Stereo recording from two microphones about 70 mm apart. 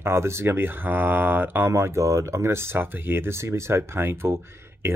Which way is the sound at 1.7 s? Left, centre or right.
Right.